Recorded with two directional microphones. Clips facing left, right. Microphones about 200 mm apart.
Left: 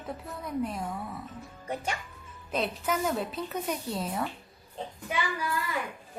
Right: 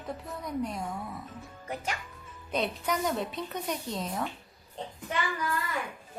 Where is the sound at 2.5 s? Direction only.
5° left (ahead or behind).